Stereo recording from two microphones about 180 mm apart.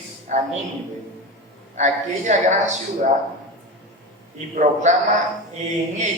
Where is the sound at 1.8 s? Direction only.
40° right (ahead or behind).